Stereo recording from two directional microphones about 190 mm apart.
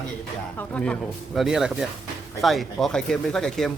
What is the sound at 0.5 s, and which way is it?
A man's voice, 10° left (ahead or behind).